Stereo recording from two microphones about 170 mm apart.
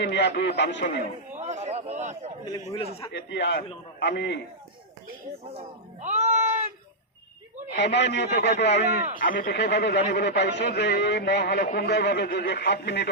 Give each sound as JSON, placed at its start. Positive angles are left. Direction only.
{"t": 0.0, "sound": "a man's voice", "side_deg": 90}
{"t": 1.4, "sound": "a sound", "side_deg": -40}
{"t": 2.7, "sound": "a man's voice", "side_deg": 35}
{"t": 3.1, "sound": "a man's voice", "side_deg": 80}
{"t": 5.5, "sound": "speech", "side_deg": -40}
{"t": 7.8, "sound": "a man's voice", "side_deg": 90}
{"t": 9.1, "sound": "a man's voice", "side_deg": 55}